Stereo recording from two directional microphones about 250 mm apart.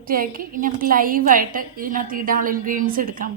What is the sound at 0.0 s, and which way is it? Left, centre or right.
A woman's voice, right.